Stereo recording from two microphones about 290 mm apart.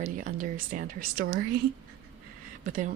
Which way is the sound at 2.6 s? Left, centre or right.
Right.